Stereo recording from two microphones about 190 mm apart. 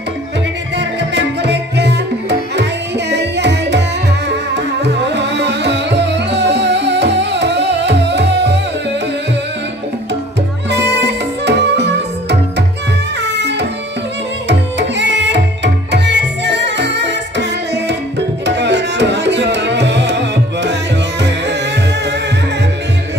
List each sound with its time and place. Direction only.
0.7 s music: 65° right (ahead or behind)
10.7 s music: 65° right (ahead or behind)
14.5 s tabla: 65° right (ahead or behind)